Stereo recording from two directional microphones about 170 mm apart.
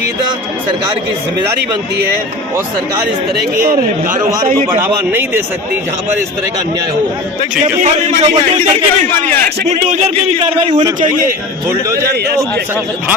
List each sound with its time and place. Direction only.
4.8 s speech: 15° right (ahead or behind)
7.6 s a man's voice: 40° right (ahead or behind)
10.8 s a man's voice: 20° right (ahead or behind)